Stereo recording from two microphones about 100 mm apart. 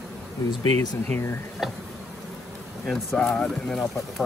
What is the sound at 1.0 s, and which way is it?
Speech, 20° left (ahead or behind).